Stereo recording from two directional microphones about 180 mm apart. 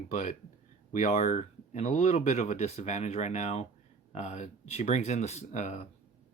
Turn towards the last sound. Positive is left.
turn(degrees=40)  # may be behind; listen again after turning